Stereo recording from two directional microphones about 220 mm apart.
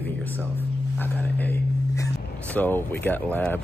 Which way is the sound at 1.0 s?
10° left (ahead or behind).